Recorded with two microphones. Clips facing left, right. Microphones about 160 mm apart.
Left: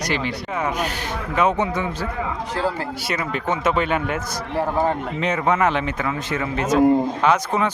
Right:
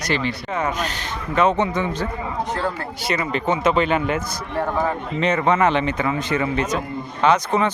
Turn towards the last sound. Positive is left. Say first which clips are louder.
# right 1 dB
turn(degrees=5)  # may be behind; listen again after turning